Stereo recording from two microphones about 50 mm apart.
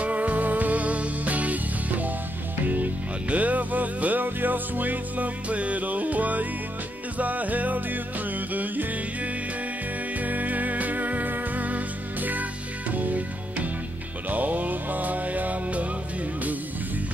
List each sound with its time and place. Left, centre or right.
0.0 s music: right